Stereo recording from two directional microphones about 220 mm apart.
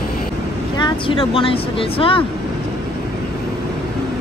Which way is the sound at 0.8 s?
20° left (ahead or behind).